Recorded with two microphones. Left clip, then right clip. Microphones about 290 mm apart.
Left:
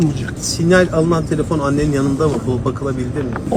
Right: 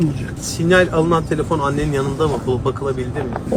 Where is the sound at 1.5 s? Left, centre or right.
Right.